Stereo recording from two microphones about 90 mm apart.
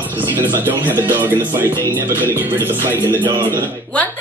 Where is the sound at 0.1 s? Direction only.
20° right (ahead or behind).